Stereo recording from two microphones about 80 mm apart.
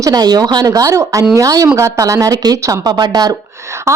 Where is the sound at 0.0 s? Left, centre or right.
Right.